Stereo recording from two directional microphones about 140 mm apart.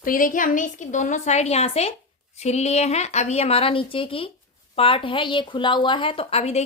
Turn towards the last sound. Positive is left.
turn(degrees=50)  # may be behind; listen again after turning